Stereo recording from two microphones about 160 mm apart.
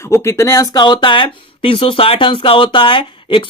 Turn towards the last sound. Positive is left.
turn(degrees=30)  # may be behind; listen again after turning